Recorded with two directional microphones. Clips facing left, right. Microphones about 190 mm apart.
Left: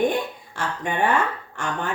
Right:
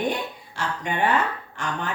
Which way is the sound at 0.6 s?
50° left (ahead or behind).